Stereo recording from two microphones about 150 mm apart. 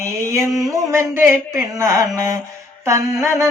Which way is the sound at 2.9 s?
20° right (ahead or behind).